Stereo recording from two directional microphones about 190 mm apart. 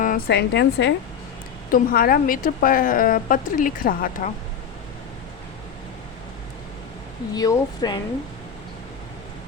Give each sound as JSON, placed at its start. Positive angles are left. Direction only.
{"t": 0.0, "sound": "a woman's voice", "side_deg": 50}
{"t": 1.7, "sound": "a woman's voice", "side_deg": 50}
{"t": 7.3, "sound": "speech", "side_deg": 20}